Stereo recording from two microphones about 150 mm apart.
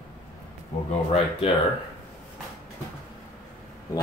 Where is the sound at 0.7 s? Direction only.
45° left (ahead or behind).